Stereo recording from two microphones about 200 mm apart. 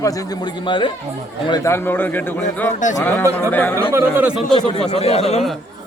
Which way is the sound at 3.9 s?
5° right (ahead or behind).